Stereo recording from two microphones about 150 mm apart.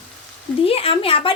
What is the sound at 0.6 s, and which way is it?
Speech, 40° left (ahead or behind).